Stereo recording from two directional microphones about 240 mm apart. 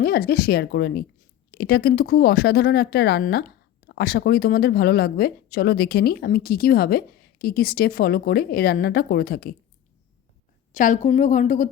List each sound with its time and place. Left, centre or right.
0.0 s speech: left
10.7 s speech: left